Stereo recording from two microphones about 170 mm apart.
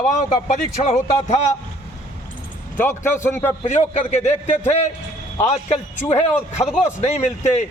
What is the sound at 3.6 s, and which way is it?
A man's voice, 45° left (ahead or behind).